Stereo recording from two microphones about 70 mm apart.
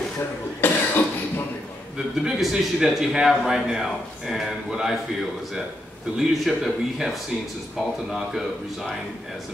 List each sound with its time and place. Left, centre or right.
0.6 s cough: left
2.2 s a man's voice: centre
6.1 s a man's voice: centre